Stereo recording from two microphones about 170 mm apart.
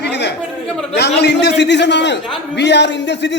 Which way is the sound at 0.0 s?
85° left.